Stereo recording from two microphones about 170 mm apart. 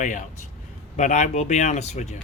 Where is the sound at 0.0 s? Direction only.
45° left (ahead or behind).